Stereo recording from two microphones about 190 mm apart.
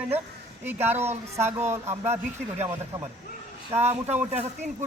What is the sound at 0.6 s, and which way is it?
A man's voice, 10° right (ahead or behind).